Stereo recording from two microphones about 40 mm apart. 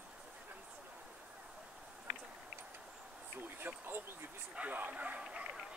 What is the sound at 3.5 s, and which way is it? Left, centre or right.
Speech, right.